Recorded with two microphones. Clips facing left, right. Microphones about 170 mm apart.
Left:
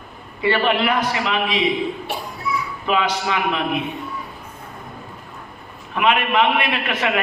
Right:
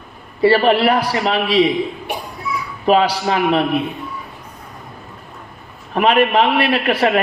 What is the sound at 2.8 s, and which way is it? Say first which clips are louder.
Speech: right 7 dB; 35° right (ahead or behind).